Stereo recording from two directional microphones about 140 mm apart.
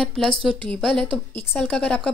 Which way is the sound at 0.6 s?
35° right (ahead or behind).